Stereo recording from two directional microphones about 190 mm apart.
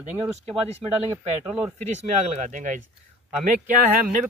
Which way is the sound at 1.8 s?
40° right (ahead or behind).